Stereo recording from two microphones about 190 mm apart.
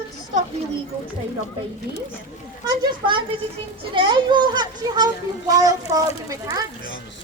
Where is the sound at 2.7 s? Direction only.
25° right (ahead or behind).